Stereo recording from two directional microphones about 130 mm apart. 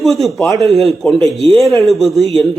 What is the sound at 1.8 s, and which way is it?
Speech, centre (ahead or behind).